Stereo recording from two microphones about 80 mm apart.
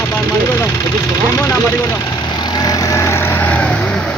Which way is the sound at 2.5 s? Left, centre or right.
Left.